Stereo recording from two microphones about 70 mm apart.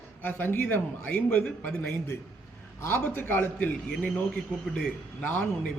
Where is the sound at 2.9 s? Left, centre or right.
Left.